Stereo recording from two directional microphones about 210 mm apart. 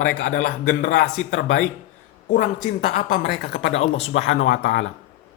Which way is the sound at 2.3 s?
40° left (ahead or behind).